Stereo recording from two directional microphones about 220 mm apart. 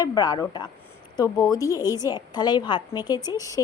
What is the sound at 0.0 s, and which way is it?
A woman's voice, 15° left (ahead or behind).